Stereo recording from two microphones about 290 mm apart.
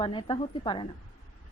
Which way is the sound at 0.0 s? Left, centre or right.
Centre.